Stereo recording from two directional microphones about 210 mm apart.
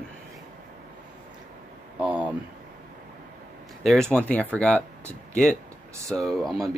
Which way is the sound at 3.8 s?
Centre (ahead or behind).